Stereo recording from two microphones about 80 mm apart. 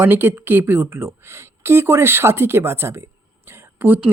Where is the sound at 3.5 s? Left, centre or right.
Right.